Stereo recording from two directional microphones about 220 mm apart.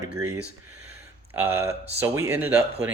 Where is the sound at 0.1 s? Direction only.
80° right.